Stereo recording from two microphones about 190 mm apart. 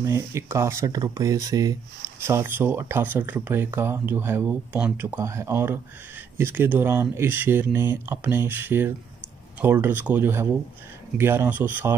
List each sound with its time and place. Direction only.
0.0 s speech: 15° right (ahead or behind)